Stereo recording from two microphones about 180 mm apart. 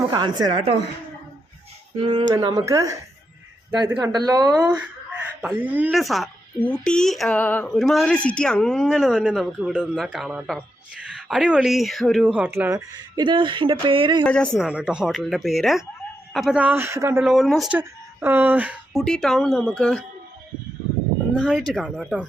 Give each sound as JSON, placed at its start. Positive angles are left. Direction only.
{"t": 0.1, "sound": "speech", "side_deg": -25}
{"t": 2.0, "sound": "speech", "side_deg": -25}
{"t": 5.4, "sound": "speech", "side_deg": -10}
{"t": 13.2, "sound": "speech", "side_deg": -25}
{"t": 14.3, "sound": "speech", "side_deg": 5}
{"t": 17.2, "sound": "speech", "side_deg": 0}
{"t": 21.3, "sound": "speech", "side_deg": -5}